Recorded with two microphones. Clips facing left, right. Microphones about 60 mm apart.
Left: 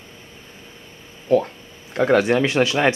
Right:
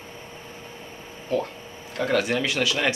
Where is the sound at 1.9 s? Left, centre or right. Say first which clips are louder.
Left 7 dB; left.